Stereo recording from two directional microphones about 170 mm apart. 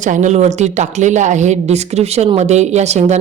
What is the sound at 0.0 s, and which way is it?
A woman's voice, 45° right (ahead or behind).